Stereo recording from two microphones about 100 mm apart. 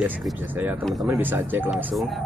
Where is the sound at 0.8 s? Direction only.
Centre (ahead or behind).